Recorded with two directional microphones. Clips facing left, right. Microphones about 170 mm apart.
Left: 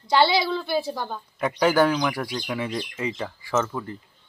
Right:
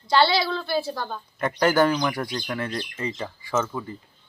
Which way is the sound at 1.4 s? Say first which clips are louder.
Even; centre (ahead or behind).